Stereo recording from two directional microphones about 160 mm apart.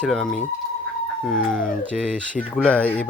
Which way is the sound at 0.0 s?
Centre (ahead or behind).